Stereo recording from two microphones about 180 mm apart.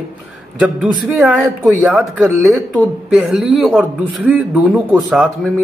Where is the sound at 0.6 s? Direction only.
5° right (ahead or behind).